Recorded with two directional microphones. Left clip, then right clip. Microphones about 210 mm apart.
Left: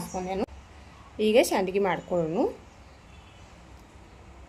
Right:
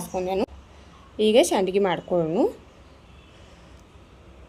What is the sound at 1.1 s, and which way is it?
A woman's voice, 20° right (ahead or behind).